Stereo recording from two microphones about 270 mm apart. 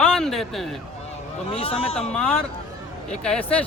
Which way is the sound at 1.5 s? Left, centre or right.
Left.